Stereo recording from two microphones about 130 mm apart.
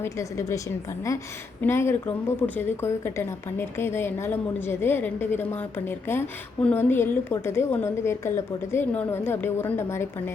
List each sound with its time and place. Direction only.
0.0 s a woman's voice: 20° left (ahead or behind)
1.6 s a woman's voice: 20° left (ahead or behind)